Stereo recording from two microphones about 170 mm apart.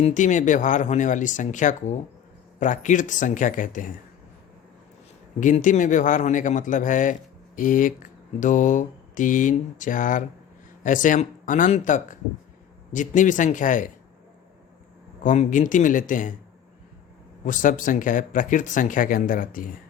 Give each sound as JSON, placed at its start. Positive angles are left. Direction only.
{"t": 0.0, "sound": "a man's voice", "side_deg": 50}
{"t": 5.4, "sound": "a man's voice", "side_deg": 50}
{"t": 15.2, "sound": "a man's voice", "side_deg": 50}
{"t": 17.4, "sound": "a man's voice", "side_deg": 50}